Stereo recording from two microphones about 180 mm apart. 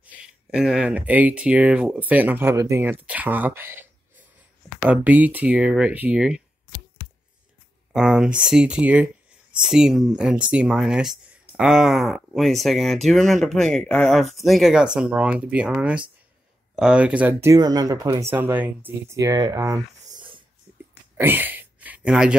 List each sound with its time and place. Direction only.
0.0 s speech: 5° right (ahead or behind)
7.9 s speech: 5° right (ahead or behind); by 20.2 s 20° right (ahead or behind)
21.2 s a sound: 10° right (ahead or behind)